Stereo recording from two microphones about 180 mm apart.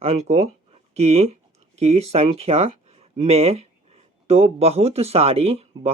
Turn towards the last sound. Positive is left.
turn(degrees=-35)  # may be behind; listen again after turning